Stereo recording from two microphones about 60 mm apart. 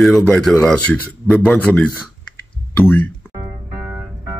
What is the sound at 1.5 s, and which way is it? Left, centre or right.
Speech, left.